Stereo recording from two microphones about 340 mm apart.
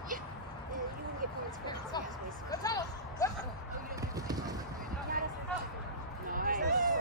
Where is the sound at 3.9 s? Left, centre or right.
Centre.